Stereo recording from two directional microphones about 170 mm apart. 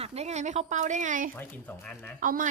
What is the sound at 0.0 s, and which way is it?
Speech, 40° right (ahead or behind).